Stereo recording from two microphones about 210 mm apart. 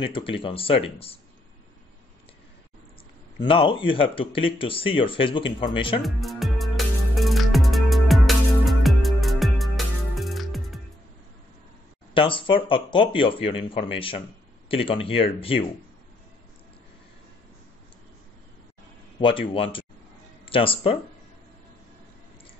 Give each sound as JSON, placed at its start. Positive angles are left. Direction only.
{"t": 0.0, "sound": "speech", "side_deg": 25}
{"t": 3.3, "sound": "speech", "side_deg": 25}
{"t": 6.0, "sound": "music", "side_deg": 0}
{"t": 12.1, "sound": "speech", "side_deg": 25}
{"t": 19.1, "sound": "a man's voice", "side_deg": 25}